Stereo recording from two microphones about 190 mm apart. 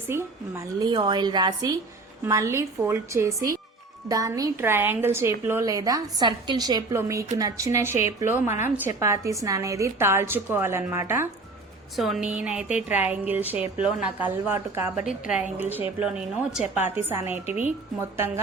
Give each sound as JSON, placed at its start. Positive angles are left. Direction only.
{"t": 0.1, "sound": "a woman's voice", "side_deg": -15}
{"t": 11.9, "sound": "a woman's voice", "side_deg": 0}